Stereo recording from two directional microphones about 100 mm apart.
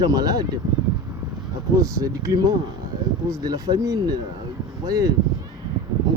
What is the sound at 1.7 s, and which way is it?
Speech, 35° right (ahead or behind).